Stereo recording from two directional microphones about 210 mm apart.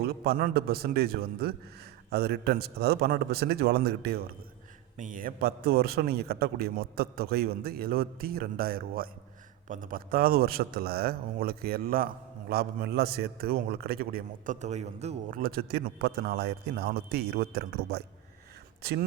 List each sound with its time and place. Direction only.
0.0 s a man's voice: 50° right (ahead or behind)